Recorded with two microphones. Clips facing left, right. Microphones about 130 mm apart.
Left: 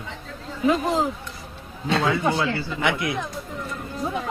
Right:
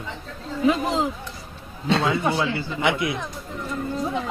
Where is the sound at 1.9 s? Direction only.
25° right (ahead or behind).